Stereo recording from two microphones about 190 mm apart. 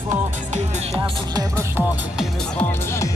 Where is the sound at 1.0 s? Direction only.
15° right (ahead or behind).